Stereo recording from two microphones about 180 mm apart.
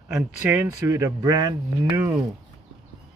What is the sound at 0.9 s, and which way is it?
Speech, 15° right (ahead or behind).